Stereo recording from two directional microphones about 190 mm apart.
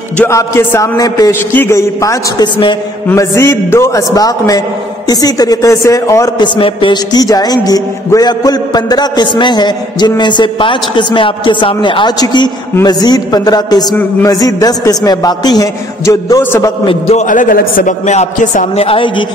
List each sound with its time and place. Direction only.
0.2 s a man's voice: 15° left (ahead or behind)
3.1 s a man's voice: 15° left (ahead or behind)
16.8 s a man's voice: 35° left (ahead or behind)